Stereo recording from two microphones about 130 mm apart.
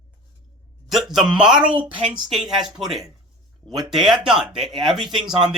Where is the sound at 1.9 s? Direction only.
40° right (ahead or behind).